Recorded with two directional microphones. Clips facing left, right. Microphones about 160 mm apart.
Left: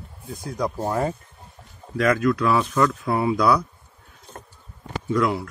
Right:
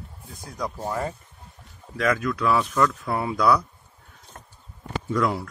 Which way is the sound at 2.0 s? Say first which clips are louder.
Left 4 dB; 5° left (ahead or behind).